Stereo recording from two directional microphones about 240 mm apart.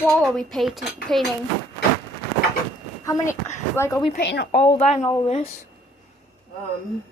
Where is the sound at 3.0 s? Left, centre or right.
Centre.